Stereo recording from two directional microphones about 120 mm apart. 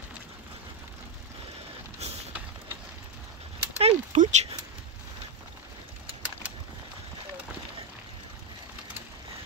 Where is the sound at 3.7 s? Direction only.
75° right (ahead or behind).